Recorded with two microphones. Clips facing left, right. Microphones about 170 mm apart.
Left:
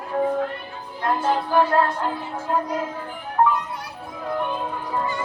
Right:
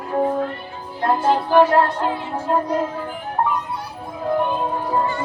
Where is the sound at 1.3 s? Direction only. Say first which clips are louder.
Right 5 dB; 80° right.